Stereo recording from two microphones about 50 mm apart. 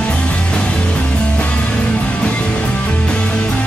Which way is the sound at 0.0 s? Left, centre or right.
Left.